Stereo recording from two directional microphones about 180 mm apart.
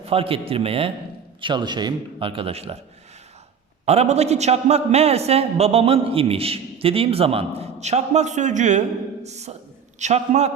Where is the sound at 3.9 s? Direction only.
35° right (ahead or behind).